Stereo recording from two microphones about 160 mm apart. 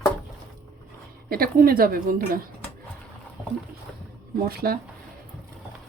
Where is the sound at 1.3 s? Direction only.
65° right (ahead or behind).